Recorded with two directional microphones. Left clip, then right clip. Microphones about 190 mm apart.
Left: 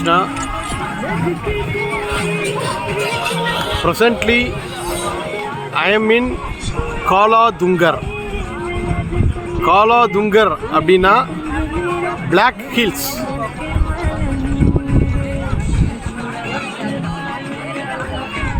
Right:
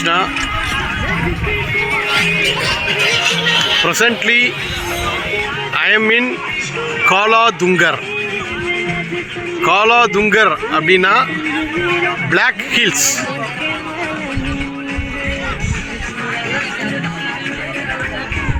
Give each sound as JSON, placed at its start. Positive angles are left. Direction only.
{"t": 0.0, "sound": "speech", "side_deg": 5}
{"t": 2.1, "sound": "music", "side_deg": 50}
{"t": 3.8, "sound": "speech", "side_deg": 5}
{"t": 5.7, "sound": "speech", "side_deg": 5}
{"t": 9.6, "sound": "speech", "side_deg": 5}
{"t": 12.3, "sound": "speech", "side_deg": 5}